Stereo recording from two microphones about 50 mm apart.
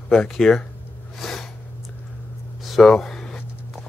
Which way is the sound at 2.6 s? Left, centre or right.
Centre.